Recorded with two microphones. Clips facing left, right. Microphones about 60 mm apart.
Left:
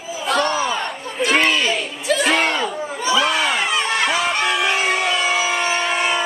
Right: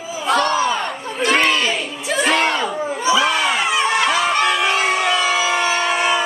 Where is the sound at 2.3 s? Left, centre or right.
Centre.